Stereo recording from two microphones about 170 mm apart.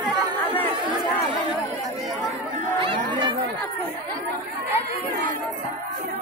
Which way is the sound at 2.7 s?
30° right (ahead or behind).